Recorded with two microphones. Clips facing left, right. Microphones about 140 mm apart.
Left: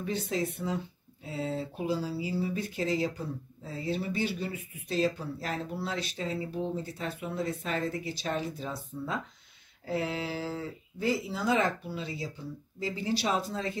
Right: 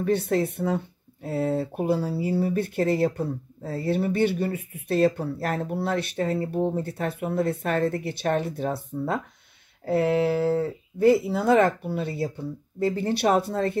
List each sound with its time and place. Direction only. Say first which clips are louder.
0.0 s speech: right 8 dB; 60° right (ahead or behind)